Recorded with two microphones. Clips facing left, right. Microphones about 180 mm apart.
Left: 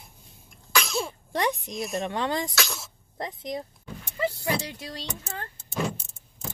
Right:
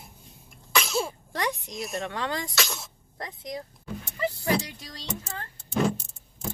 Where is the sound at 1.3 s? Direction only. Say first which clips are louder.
Left 3 dB; 25° left (ahead or behind).